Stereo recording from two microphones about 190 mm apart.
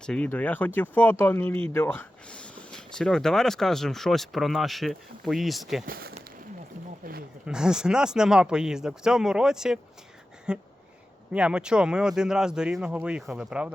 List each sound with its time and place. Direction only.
0.0 s speech: 5° left (ahead or behind)
5.8 s speech: 50° right (ahead or behind)
7.0 s a sound: 55° right (ahead or behind)
7.4 s speech: 5° right (ahead or behind)